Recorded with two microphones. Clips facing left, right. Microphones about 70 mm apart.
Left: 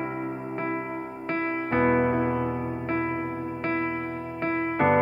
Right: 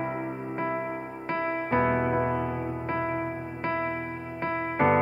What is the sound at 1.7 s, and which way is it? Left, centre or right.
Music, left.